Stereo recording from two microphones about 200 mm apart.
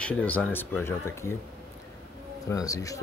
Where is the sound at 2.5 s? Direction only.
15° left (ahead or behind).